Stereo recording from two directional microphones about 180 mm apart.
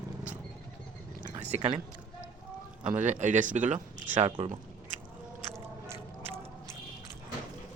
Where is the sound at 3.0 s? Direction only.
40° right (ahead or behind).